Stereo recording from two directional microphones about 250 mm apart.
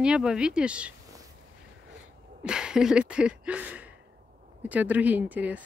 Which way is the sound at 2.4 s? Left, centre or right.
Centre.